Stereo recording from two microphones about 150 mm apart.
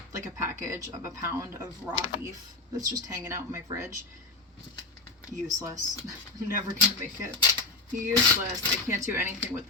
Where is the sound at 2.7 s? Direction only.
20° right (ahead or behind).